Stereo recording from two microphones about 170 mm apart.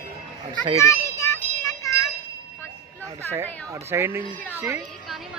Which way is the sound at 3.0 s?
15° right (ahead or behind).